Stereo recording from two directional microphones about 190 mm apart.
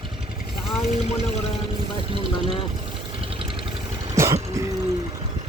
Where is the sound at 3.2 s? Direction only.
30° right (ahead or behind).